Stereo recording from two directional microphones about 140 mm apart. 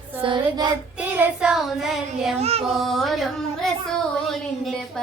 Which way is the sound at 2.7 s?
Centre (ahead or behind).